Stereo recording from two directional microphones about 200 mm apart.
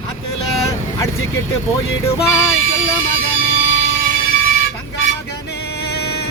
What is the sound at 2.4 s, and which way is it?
Music, 85° left.